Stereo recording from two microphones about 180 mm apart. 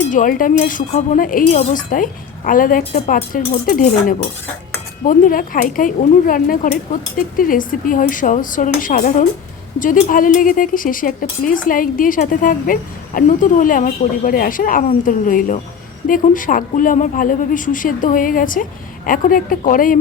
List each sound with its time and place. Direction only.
0.1 s speech: 50° left (ahead or behind)